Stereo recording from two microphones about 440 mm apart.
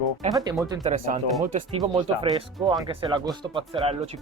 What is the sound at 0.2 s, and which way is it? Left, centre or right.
Speech, centre.